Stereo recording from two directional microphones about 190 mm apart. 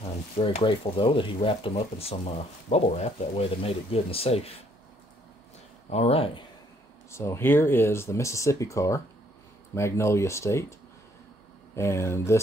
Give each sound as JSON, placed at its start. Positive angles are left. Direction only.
{"t": 0.0, "sound": "speech", "side_deg": 30}
{"t": 5.9, "sound": "speech", "side_deg": 35}
{"t": 7.1, "sound": "speech", "side_deg": 15}
{"t": 11.7, "sound": "speech", "side_deg": 15}